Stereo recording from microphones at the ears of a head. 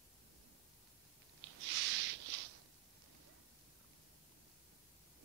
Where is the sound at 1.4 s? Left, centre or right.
Right.